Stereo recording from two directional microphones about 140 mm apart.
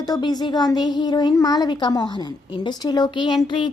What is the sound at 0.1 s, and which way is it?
A woman's voice, 30° left (ahead or behind).